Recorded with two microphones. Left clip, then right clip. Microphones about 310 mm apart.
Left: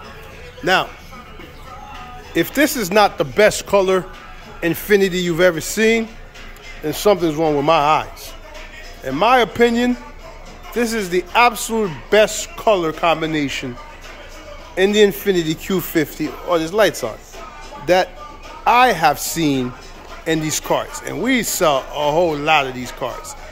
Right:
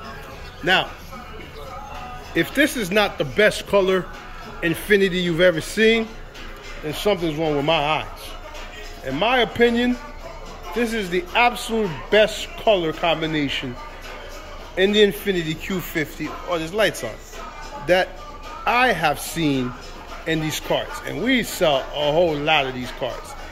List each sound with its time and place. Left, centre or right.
2.3 s a man's voice: centre
14.8 s a man's voice: centre